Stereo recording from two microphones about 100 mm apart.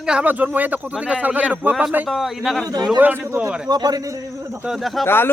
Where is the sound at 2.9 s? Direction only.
15° right (ahead or behind).